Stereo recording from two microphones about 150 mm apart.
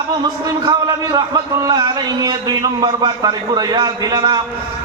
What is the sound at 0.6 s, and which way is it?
A man's voice, 25° right (ahead or behind).